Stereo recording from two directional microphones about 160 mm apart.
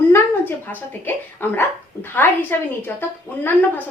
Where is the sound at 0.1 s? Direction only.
10° left (ahead or behind).